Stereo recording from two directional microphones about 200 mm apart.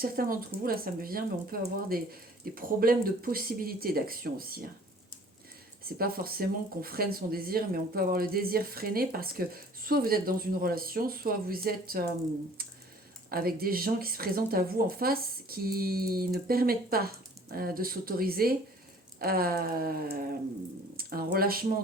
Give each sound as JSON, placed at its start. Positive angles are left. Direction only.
{"t": 0.0, "sound": "speech", "side_deg": -45}
{"t": 5.8, "sound": "speech", "side_deg": -50}
{"t": 13.3, "sound": "speech", "side_deg": -50}